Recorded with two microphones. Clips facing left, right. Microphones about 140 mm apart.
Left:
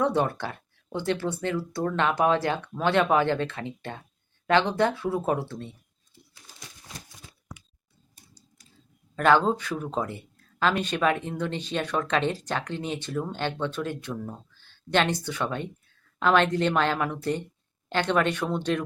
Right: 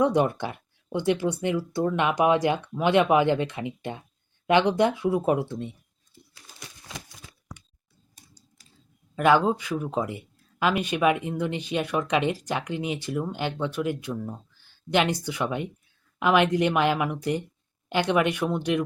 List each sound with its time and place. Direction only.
0.0 s speech: 15° right (ahead or behind)
6.8 s a sound: 90° right
9.1 s speech: 10° right (ahead or behind)